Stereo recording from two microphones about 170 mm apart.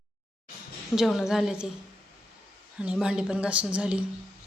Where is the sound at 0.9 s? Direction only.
Centre (ahead or behind).